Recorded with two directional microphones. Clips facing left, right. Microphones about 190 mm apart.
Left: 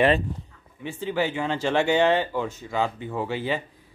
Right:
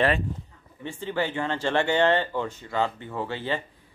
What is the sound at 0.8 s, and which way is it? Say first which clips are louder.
Speech: left 2 dB; 10° left (ahead or behind).